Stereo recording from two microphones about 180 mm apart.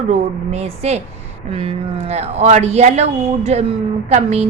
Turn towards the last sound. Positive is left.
turn(degrees=-35)  # may be behind; listen again after turning